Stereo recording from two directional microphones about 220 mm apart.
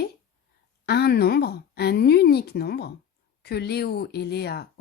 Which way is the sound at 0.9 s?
45° left (ahead or behind).